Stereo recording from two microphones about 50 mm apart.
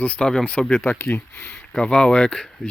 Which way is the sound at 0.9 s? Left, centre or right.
Left.